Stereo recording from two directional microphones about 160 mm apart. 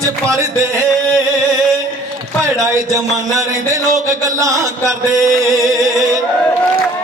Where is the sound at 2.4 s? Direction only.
20° right (ahead or behind).